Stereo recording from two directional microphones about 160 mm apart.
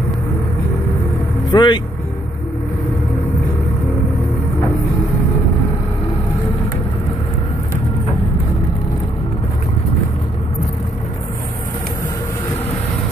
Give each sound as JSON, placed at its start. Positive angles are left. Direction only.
{"t": 1.5, "sound": "speech", "side_deg": 30}